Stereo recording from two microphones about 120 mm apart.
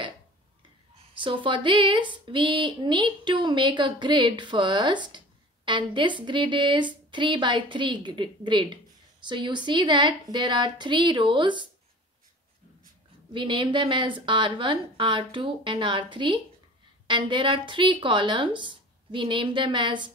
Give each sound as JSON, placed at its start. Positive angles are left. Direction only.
{"t": 1.1, "sound": "speech", "side_deg": -45}
{"t": 13.3, "sound": "a woman's voice", "side_deg": -45}